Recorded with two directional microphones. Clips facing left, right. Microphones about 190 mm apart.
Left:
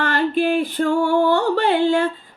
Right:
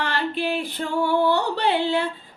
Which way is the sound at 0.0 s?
45° left (ahead or behind).